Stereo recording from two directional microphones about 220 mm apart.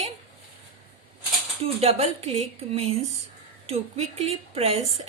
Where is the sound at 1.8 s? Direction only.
25° right (ahead or behind).